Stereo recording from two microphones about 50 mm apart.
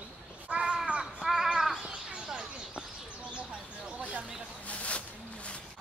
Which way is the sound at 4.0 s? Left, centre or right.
Right.